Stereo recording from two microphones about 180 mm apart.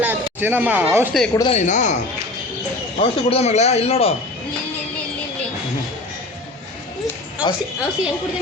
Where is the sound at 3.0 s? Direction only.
35° left (ahead or behind).